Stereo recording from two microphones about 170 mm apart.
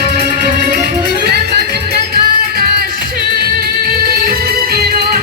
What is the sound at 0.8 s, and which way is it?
Music, 70° right (ahead or behind).